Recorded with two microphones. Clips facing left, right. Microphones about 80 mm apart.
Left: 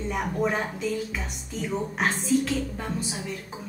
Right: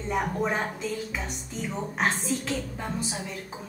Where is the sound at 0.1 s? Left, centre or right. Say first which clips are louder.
Even; centre.